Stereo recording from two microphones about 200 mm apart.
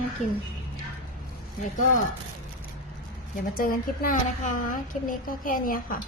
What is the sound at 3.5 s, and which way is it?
A woman's voice, 45° left (ahead or behind).